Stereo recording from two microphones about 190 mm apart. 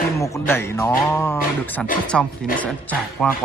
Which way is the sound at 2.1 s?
Centre (ahead or behind).